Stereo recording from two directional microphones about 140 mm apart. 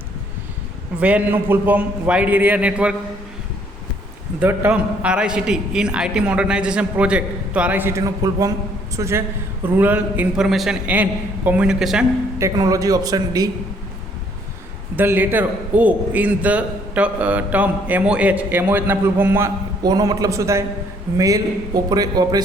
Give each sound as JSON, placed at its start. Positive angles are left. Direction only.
{"t": 0.9, "sound": "a man's voice", "side_deg": -10}
{"t": 4.4, "sound": "a man's voice", "side_deg": -10}
{"t": 12.4, "sound": "a man's voice", "side_deg": -25}
{"t": 14.9, "sound": "a man's voice", "side_deg": -15}
{"t": 19.8, "sound": "a man's voice", "side_deg": -25}